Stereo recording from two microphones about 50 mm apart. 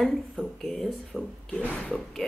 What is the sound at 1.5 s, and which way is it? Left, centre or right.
Speech, left.